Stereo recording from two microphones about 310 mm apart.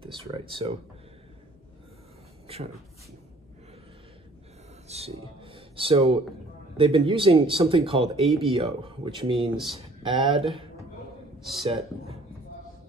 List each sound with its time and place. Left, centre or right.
0.0 s speech: centre
2.4 s speech: centre
4.8 s speech: centre